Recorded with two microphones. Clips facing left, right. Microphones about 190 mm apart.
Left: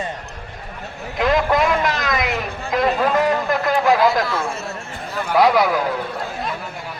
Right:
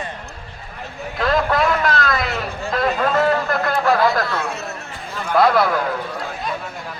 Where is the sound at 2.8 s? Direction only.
Centre (ahead or behind).